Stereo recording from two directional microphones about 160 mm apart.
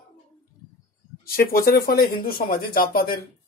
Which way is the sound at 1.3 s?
70° left (ahead or behind).